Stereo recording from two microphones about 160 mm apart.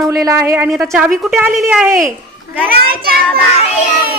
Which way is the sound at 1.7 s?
15° right (ahead or behind).